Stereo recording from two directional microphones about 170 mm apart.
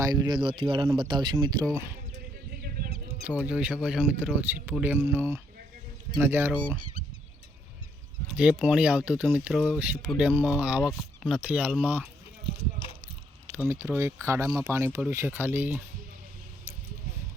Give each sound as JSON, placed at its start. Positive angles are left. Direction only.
{"t": 0.0, "sound": "speech", "side_deg": -20}
{"t": 1.7, "sound": "speech", "side_deg": -15}
{"t": 2.6, "sound": "a sound", "side_deg": -60}
{"t": 3.2, "sound": "speech", "side_deg": -10}
{"t": 8.4, "sound": "speech", "side_deg": -5}
{"t": 13.7, "sound": "speech", "side_deg": -15}